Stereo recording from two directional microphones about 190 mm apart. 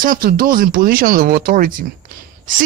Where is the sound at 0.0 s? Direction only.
50° right (ahead or behind).